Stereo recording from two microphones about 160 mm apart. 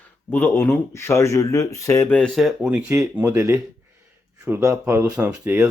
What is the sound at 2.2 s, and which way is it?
Speech, centre (ahead or behind).